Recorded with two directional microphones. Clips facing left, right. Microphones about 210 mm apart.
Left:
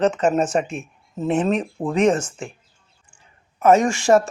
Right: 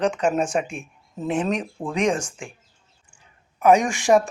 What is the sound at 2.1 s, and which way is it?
Speech, 10° right (ahead or behind).